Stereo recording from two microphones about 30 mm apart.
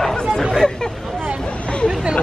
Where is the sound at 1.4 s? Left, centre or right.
Left.